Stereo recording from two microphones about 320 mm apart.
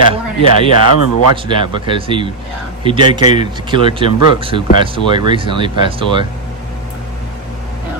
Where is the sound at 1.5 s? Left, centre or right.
Centre.